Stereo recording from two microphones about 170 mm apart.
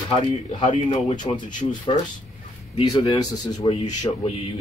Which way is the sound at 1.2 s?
25° left (ahead or behind).